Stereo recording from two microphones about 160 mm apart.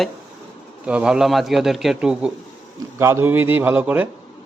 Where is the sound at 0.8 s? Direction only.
5° right (ahead or behind).